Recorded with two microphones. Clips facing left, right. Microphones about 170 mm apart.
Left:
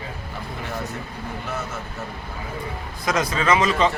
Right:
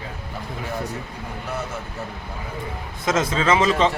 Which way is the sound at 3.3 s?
25° right (ahead or behind).